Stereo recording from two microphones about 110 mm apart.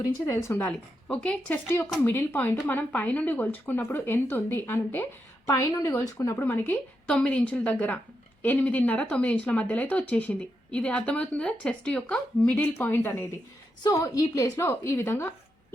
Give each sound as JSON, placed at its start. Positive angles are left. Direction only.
{"t": 0.0, "sound": "speech", "side_deg": 25}
{"t": 5.5, "sound": "a woman's voice", "side_deg": 30}